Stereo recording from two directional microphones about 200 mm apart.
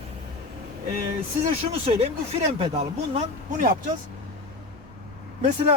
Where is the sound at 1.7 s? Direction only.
30° right (ahead or behind).